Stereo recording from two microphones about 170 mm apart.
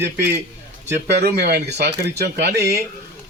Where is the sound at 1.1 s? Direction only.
75° right (ahead or behind).